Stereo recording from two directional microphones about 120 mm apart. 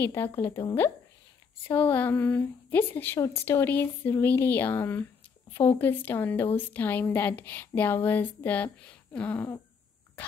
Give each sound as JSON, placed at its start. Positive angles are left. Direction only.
{"t": 0.0, "sound": "a woman's voice", "side_deg": 20}